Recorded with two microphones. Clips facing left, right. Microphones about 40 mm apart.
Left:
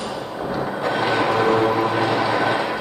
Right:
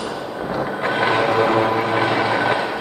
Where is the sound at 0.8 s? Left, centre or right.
Right.